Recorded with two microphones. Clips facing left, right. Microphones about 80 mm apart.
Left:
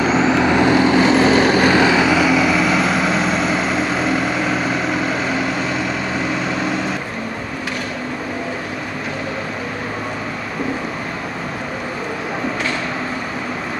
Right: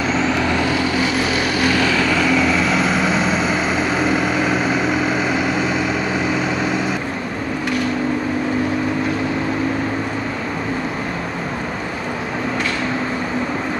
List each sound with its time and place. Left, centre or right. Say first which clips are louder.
0.2 s vehicle: left 4 dB; centre; by 1.8 s left
1.8 s vehicle: left 3 dB; centre